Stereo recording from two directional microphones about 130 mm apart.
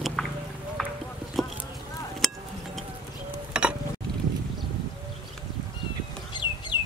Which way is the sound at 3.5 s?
5° right (ahead or behind).